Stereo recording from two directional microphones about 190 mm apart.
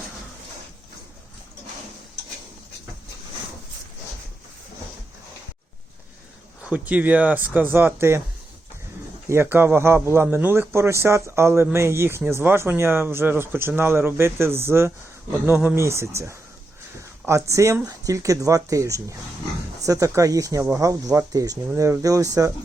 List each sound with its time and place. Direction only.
6.6 s speech: 5° right (ahead or behind)
9.3 s speech: 10° right (ahead or behind)
17.5 s speech: 15° right (ahead or behind)